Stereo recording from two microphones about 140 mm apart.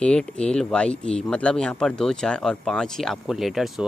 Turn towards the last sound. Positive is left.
turn(degrees=0)  # may be behind; listen again after turning